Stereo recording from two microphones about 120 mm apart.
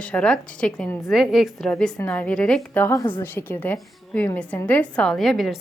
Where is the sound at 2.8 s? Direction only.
20° left (ahead or behind).